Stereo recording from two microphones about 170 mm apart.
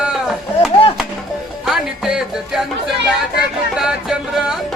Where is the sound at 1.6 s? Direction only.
5° right (ahead or behind).